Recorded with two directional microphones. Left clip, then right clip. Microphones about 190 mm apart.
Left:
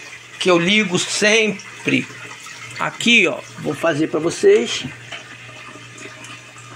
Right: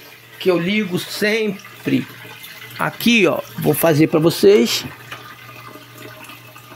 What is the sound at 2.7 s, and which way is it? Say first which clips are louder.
Speech: left 2 dB; 45° right (ahead or behind).